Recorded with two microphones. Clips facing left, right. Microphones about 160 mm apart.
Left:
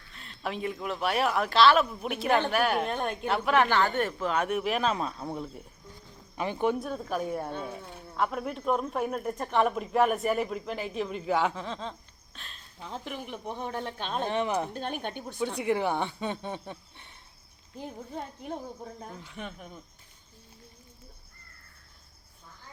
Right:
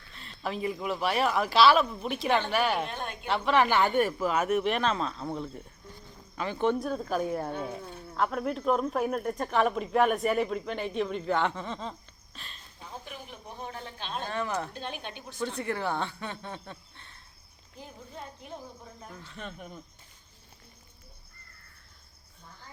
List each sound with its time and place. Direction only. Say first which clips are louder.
0.1 s speech: even; centre (ahead or behind)
3.7 s speech: right 2 dB; 15° right (ahead or behind)
12.9 s a woman's voice: left 6 dB; 65° left (ahead or behind)
14.3 s speech: left 3 dB; 20° left (ahead or behind)
14.8 s a woman's voice: left 5 dB; 50° left (ahead or behind)
15.5 s speech: left 5 dB; 15° left (ahead or behind)
19.2 s speech: left 2 dB; 10° left (ahead or behind)